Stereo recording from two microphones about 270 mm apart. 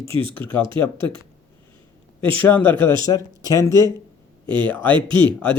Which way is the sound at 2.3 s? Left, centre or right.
Centre.